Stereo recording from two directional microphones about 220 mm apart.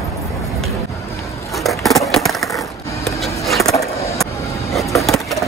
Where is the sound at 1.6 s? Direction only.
Centre (ahead or behind).